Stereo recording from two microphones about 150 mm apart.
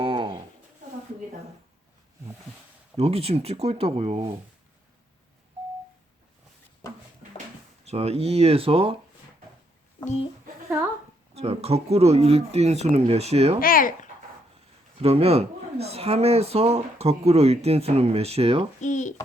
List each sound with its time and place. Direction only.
0.0 s a sound: 35° right (ahead or behind)
3.0 s speech: 40° right (ahead or behind)
7.9 s speech: 45° right (ahead or behind)
11.3 s speech: 45° right (ahead or behind)
13.6 s speech: 70° left (ahead or behind)
14.9 s speech: 40° right (ahead or behind)
18.8 s speech: 55° left (ahead or behind)